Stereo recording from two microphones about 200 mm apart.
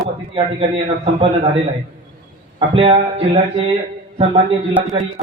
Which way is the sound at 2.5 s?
30° right (ahead or behind).